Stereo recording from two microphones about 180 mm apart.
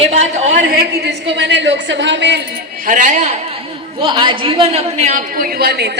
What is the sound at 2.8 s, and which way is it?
Speech, 45° right (ahead or behind).